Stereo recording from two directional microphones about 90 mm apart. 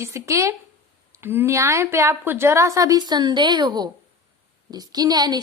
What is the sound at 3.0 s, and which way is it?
A woman's voice, 50° right (ahead or behind).